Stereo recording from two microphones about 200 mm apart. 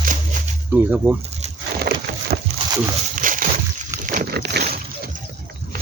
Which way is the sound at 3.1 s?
40° right (ahead or behind).